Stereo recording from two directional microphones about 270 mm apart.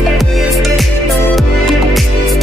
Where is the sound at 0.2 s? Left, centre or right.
Centre.